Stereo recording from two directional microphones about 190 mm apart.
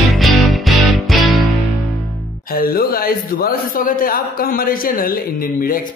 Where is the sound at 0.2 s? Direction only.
Centre (ahead or behind).